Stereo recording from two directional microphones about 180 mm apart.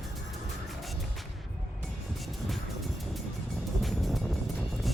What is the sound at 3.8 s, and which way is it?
Music, centre (ahead or behind).